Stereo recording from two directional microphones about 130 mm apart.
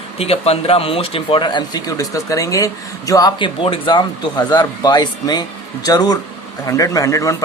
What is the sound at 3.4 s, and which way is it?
Speech, 40° left (ahead or behind).